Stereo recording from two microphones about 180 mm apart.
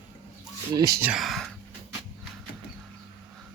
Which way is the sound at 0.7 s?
20° right (ahead or behind).